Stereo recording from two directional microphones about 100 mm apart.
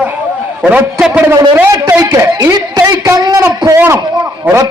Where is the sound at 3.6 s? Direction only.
30° right (ahead or behind).